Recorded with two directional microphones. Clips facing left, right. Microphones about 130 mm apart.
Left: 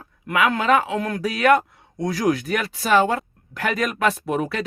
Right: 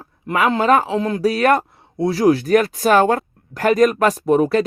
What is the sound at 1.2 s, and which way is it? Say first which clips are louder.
Speech: right 1 dB; 35° right (ahead or behind).